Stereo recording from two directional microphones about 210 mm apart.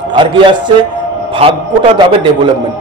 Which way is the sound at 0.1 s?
20° right (ahead or behind).